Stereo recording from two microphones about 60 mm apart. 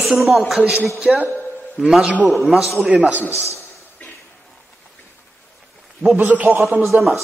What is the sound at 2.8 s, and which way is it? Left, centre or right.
Speech, centre.